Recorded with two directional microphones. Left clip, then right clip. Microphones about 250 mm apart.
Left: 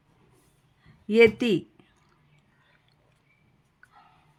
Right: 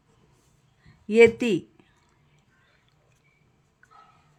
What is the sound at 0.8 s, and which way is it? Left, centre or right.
Speech, centre.